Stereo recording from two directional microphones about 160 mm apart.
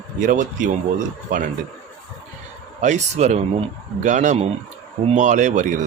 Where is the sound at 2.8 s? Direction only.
45° right (ahead or behind).